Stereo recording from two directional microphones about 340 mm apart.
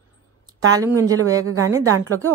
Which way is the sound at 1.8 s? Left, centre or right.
Right.